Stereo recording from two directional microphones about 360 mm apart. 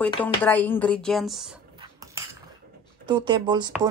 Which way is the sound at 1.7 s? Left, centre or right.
Centre.